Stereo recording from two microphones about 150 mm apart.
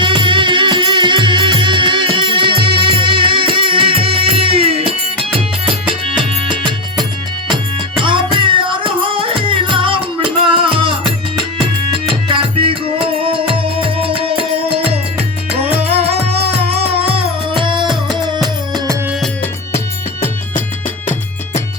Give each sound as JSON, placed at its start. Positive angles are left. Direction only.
{"t": 0.0, "sound": "music", "side_deg": -30}
{"t": 6.5, "sound": "music", "side_deg": -30}
{"t": 8.0, "sound": "music", "side_deg": -35}
{"t": 12.3, "sound": "music", "side_deg": -35}